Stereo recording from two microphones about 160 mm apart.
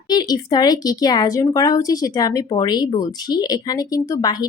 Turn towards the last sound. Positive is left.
turn(degrees=20)  # may be behind; listen again after turning